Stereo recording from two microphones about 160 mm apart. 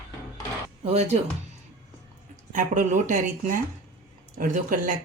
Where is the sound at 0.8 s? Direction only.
45° right (ahead or behind).